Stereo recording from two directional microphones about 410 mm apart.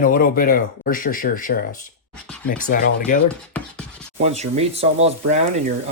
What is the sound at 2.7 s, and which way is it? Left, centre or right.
Speech, centre.